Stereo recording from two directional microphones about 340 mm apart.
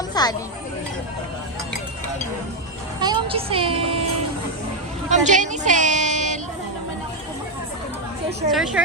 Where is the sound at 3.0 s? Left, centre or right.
Centre.